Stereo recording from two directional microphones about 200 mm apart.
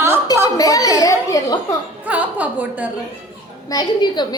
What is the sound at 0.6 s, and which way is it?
Laughter, 15° left (ahead or behind).